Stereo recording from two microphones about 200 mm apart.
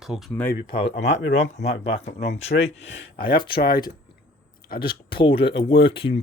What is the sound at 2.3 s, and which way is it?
Speech, 30° left (ahead or behind).